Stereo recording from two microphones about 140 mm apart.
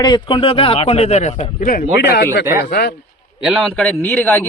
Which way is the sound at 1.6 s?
90° left.